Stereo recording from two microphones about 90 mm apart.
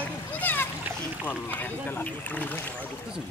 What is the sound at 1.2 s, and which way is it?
Speech, 20° left (ahead or behind).